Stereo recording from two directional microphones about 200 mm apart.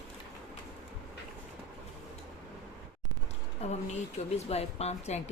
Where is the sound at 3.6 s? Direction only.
30° left (ahead or behind).